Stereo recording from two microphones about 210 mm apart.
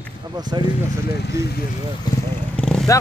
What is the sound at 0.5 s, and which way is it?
Speech, 20° right (ahead or behind).